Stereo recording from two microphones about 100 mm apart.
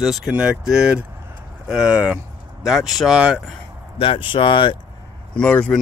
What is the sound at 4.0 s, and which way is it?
Speech, 60° left (ahead or behind).